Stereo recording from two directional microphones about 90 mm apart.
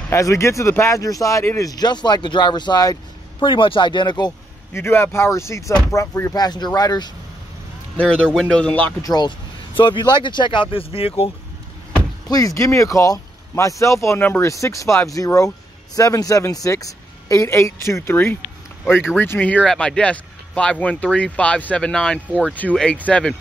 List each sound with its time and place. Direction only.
0.1 s speech: 35° left (ahead or behind)
3.3 s speech: 70° left (ahead or behind)
4.7 s speech: 30° left (ahead or behind)
6.3 s speech: 50° left (ahead or behind)
8.0 s speech: 10° left (ahead or behind)
9.0 s speech: 45° left (ahead or behind)
9.8 s speech: 65° left (ahead or behind); by 11.3 s 90° left
12.3 s speech: 40° left (ahead or behind); by 23.3 s 15° left (ahead or behind)